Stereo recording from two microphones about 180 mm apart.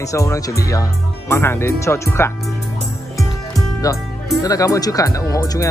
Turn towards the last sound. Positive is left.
turn(degrees=20)  # may be behind; listen again after turning